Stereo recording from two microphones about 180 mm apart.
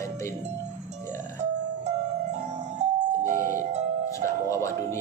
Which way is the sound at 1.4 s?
40° right (ahead or behind).